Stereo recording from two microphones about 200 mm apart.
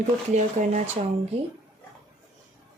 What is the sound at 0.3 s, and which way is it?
Speech, 35° right (ahead or behind).